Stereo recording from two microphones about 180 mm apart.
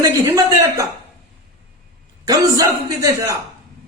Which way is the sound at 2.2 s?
20° right (ahead or behind).